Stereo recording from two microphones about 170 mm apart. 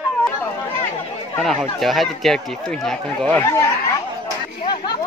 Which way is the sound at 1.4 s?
Centre (ahead or behind).